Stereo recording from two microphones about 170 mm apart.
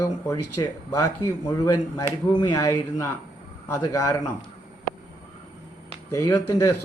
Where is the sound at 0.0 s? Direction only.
15° left (ahead or behind).